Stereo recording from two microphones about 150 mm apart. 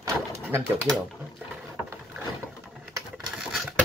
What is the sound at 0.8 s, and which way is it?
Speech, centre (ahead or behind).